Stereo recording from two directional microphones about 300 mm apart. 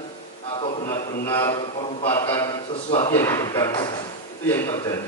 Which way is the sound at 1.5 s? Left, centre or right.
Centre.